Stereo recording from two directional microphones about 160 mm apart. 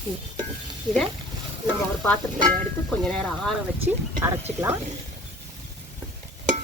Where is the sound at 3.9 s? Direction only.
15° right (ahead or behind).